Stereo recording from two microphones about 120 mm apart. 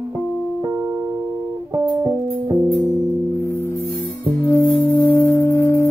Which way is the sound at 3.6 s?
20° left (ahead or behind).